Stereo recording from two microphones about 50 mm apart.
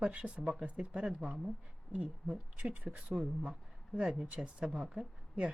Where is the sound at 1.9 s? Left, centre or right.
Right.